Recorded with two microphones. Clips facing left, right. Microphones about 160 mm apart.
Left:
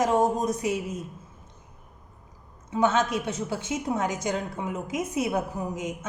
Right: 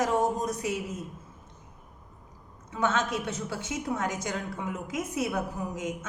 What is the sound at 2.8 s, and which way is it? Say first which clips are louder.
A woman's voice: left 4 dB; 15° left (ahead or behind).